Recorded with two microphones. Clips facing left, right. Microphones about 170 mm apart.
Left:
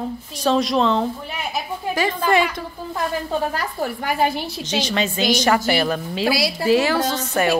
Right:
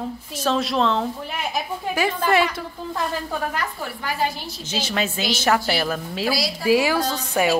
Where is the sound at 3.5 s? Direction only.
50° left (ahead or behind).